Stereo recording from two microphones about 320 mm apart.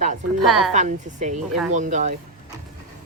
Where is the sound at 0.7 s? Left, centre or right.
Right.